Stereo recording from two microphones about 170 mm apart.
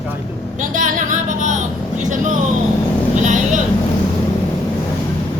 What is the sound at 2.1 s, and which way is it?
Speech, 50° right (ahead or behind).